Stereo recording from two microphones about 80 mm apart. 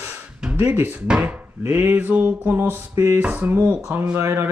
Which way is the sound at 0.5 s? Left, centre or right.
Right.